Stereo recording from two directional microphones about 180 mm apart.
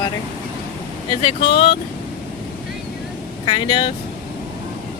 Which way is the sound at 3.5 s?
30° left (ahead or behind).